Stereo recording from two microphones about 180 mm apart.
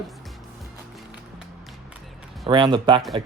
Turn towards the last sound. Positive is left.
turn(degrees=-25)  # may be behind; listen again after turning